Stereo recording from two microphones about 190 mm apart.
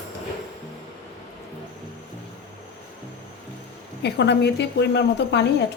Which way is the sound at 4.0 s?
60° left (ahead or behind).